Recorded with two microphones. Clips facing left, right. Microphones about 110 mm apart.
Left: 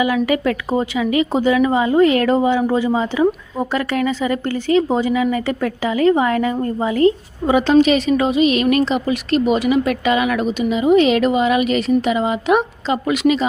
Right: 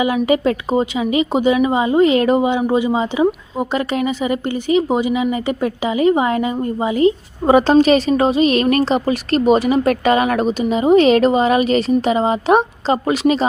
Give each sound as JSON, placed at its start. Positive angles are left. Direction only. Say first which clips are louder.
{"t": 0.0, "sound": "a woman's voice", "louder": "right 1 dB", "side_deg": -25}
{"t": 7.4, "sound": "a woman's voice", "louder": "right 2 dB", "side_deg": -40}